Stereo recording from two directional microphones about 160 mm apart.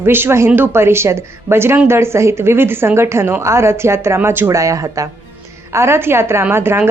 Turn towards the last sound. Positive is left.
turn(degrees=-15)  # may be behind; listen again after turning